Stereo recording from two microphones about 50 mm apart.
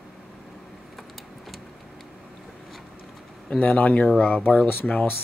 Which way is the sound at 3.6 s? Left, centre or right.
Left.